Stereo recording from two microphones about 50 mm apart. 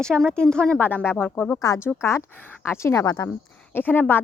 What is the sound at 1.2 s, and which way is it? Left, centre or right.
Speech, left.